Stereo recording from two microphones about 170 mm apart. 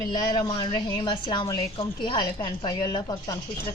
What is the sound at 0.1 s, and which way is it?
A woman's voice, 25° left (ahead or behind).